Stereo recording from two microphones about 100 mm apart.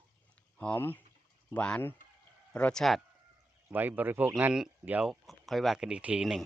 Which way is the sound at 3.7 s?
20° right (ahead or behind).